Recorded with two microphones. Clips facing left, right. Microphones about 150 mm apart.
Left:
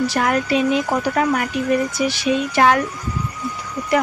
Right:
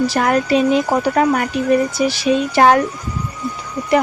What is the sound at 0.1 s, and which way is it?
Speech, 35° right (ahead or behind).